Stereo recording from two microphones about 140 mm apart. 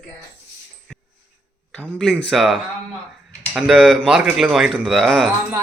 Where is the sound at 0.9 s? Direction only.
5° right (ahead or behind).